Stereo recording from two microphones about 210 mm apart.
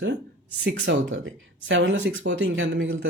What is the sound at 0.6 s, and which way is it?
Speech, 55° right (ahead or behind).